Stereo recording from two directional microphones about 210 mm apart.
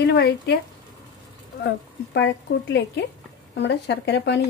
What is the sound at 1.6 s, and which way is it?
Speech, 55° left (ahead or behind).